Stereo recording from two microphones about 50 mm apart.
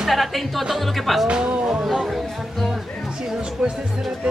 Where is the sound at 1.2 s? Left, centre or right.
Centre.